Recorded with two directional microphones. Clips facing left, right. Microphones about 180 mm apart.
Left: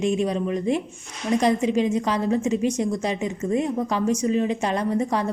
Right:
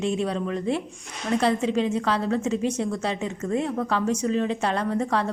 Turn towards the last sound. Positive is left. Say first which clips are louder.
# left 1 dB
turn(degrees=10)  # may be behind; listen again after turning